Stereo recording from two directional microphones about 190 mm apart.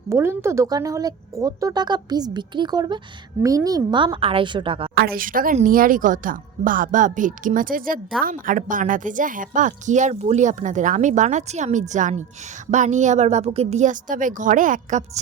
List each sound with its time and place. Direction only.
0.1 s a woman's voice: 15° right (ahead or behind)
4.9 s a woman's voice: 50° right (ahead or behind)